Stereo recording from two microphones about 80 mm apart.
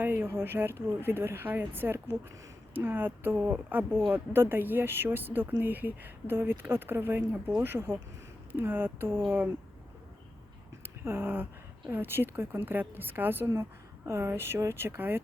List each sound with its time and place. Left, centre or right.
0.0 s speech: right
11.0 s speech: right